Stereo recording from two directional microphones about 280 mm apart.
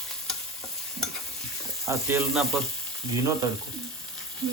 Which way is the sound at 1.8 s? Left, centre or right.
Centre.